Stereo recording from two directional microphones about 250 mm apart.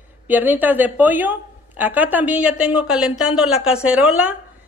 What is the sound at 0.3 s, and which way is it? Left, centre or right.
A woman's voice, centre.